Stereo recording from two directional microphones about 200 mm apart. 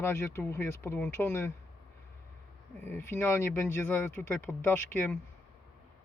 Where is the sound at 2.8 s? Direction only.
10° left (ahead or behind).